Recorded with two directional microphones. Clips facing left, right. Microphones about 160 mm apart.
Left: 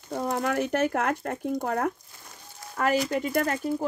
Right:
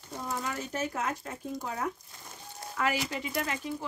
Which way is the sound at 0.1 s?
60° left (ahead or behind).